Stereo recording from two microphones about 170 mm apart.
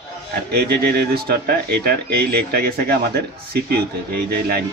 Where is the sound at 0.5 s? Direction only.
70° right (ahead or behind).